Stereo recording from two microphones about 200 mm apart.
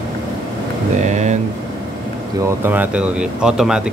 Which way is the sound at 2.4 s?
10° right (ahead or behind).